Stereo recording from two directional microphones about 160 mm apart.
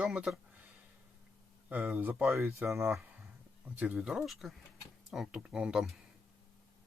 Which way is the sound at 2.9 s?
5° right (ahead or behind).